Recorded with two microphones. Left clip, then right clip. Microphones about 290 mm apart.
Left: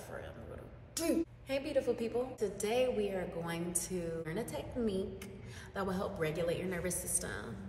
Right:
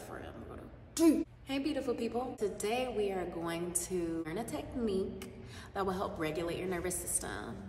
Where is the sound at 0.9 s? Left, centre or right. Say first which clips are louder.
Right 6 dB; centre.